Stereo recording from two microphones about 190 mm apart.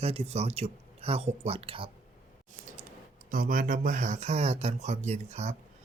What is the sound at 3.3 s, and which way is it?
Speech, 45° right (ahead or behind).